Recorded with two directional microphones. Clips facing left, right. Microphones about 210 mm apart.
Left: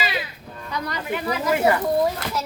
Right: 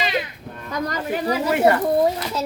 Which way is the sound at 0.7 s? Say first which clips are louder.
Right 3 dB; 45° right (ahead or behind).